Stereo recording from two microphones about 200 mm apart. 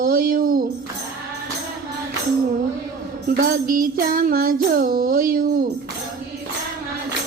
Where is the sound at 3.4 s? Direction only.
45° right (ahead or behind).